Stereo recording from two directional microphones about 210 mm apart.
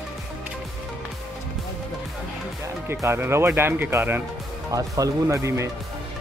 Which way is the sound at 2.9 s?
10° right (ahead or behind).